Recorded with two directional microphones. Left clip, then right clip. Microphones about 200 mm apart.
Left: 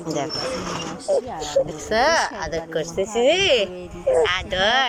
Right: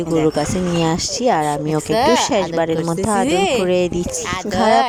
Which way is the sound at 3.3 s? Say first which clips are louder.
Left 2 dB; 20° right (ahead or behind).